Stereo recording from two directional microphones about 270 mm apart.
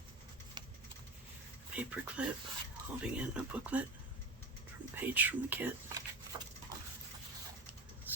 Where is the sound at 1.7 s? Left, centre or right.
Centre.